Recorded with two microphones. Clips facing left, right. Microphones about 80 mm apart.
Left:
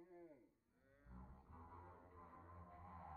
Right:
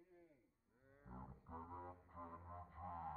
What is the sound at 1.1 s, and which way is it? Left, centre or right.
Music, right.